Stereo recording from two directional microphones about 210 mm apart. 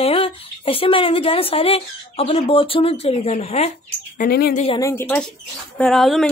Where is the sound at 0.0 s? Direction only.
25° left (ahead or behind).